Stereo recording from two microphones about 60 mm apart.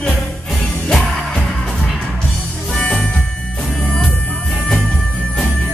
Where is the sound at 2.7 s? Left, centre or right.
Centre.